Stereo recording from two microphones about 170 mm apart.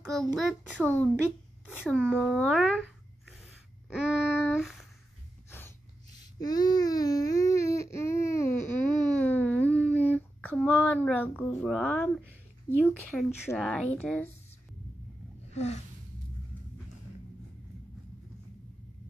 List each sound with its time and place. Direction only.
0.1 s a child's voice: centre (ahead or behind)
2.2 s a child's voice: centre (ahead or behind)
3.9 s a child's voice: 5° right (ahead or behind)
6.1 s a sound: 25° left (ahead or behind)
11.1 s speech: 10° left (ahead or behind)
15.5 s a sound: 40° left (ahead or behind)